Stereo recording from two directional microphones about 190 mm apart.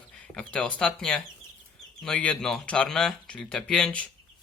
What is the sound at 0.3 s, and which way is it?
Speech, 5° left (ahead or behind).